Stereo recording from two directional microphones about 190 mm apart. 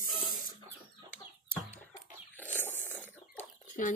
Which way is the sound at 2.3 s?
10° left (ahead or behind).